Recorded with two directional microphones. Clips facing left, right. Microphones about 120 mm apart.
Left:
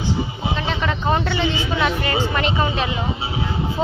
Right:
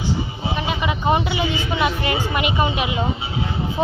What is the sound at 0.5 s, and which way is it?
A woman's voice, 10° right (ahead or behind).